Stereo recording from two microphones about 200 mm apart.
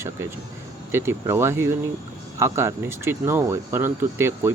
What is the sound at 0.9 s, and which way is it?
Speech, 10° right (ahead or behind).